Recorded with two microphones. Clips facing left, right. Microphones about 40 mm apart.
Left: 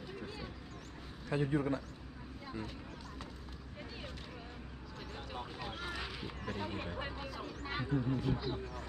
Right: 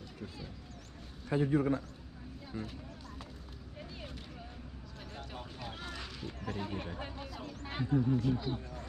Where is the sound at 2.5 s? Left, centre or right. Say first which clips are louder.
Right 2 dB; centre.